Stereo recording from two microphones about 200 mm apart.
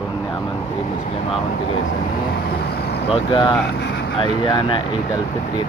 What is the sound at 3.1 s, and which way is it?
Speech, 25° left (ahead or behind).